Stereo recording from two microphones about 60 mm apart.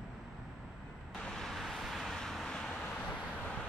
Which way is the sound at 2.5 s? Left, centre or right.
Centre.